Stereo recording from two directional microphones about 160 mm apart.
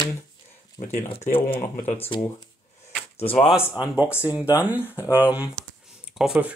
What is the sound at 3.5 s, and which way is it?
Speech, 5° right (ahead or behind).